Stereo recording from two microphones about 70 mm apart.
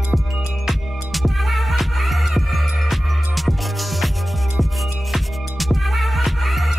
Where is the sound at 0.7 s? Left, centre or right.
Centre.